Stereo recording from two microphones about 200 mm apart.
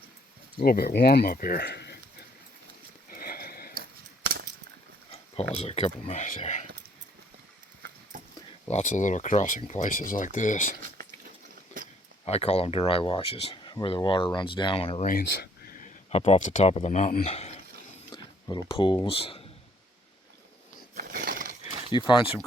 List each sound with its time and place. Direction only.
0.6 s speech: 50° left (ahead or behind)
3.1 s horse: 45° left (ahead or behind)
3.8 s scissors: 50° right (ahead or behind)
5.1 s speech: 30° left (ahead or behind)
8.7 s speech: 35° left (ahead or behind)
12.2 s speech: 30° left (ahead or behind)
15.0 s speech: 45° left (ahead or behind); by 19.5 s 30° left (ahead or behind)
20.9 s a sound: 45° right (ahead or behind)
21.7 s a sound: 25° right (ahead or behind)
21.9 s speech: 20° left (ahead or behind)